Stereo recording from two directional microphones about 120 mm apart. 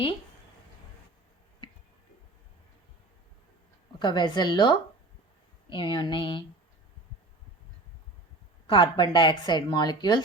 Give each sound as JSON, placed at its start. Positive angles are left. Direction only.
{"t": 4.0, "sound": "speech", "side_deg": 40}
{"t": 8.7, "sound": "speech", "side_deg": 40}